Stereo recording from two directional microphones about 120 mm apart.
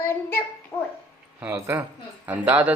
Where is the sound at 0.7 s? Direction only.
30° left (ahead or behind).